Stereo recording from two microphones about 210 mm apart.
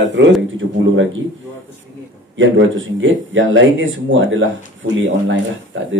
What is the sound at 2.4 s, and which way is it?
Speech, 65° right (ahead or behind).